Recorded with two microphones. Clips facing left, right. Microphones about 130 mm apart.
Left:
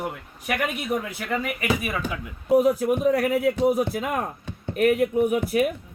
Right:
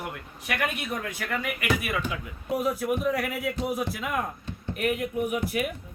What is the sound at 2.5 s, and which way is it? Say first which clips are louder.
Speech: left 7 dB; 35° left (ahead or behind).